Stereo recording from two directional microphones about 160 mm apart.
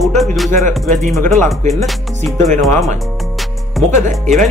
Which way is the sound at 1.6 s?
45° right (ahead or behind).